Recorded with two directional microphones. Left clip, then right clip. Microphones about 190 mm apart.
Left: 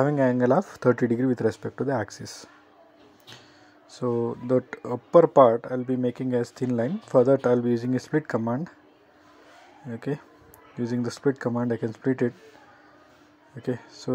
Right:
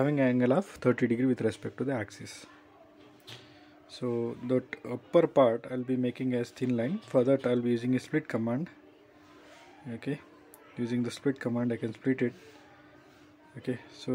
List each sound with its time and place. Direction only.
0.0 s speech: 5° left (ahead or behind)
0.5 s speech: 15° right (ahead or behind)
1.2 s speech: centre (ahead or behind)
3.9 s speech: 10° left (ahead or behind)
8.2 s speech: centre (ahead or behind)
9.9 s speech: 10° left (ahead or behind)
11.3 s speech: 10° right (ahead or behind)
11.6 s speech: 10° left (ahead or behind)
13.6 s speech: 10° left (ahead or behind)